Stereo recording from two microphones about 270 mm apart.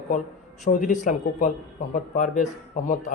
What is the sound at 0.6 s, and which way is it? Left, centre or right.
Speech, left.